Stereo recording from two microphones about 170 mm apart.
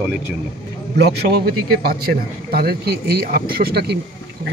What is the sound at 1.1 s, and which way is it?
A man's voice, 65° right (ahead or behind).